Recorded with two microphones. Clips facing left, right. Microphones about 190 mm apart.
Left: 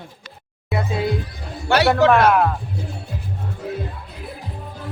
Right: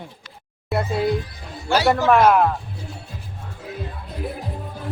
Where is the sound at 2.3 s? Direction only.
Centre (ahead or behind).